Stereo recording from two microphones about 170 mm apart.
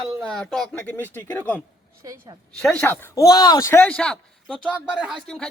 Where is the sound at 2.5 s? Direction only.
5° left (ahead or behind).